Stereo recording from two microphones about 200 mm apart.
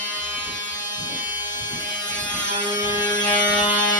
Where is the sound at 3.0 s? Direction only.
20° left (ahead or behind).